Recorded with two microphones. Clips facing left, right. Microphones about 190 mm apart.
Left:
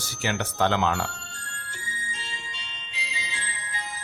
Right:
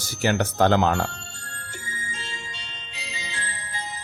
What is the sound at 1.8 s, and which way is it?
Music, 50° right (ahead or behind).